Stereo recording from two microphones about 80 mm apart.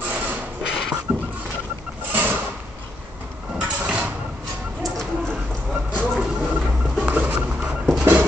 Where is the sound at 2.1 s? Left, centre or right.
Right.